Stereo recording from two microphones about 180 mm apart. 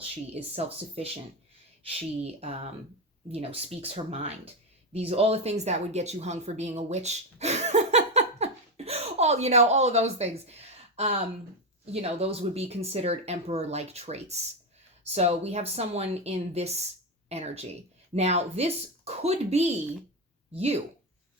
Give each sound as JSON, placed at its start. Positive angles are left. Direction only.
{"t": 0.0, "sound": "speech", "side_deg": -35}